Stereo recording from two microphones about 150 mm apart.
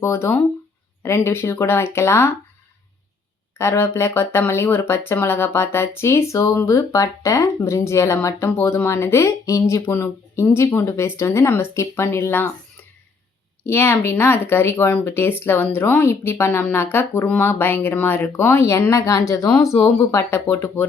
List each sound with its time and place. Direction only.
0.0 s speech: 15° left (ahead or behind)
3.6 s speech: 15° left (ahead or behind)
13.7 s speech: 15° left (ahead or behind)